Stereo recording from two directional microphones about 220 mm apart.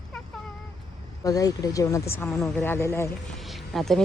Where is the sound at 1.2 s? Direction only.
15° left (ahead or behind).